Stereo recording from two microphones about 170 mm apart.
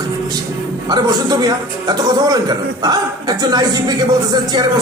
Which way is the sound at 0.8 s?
25° right (ahead or behind).